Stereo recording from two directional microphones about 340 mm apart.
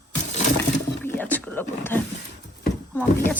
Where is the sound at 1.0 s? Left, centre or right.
Centre.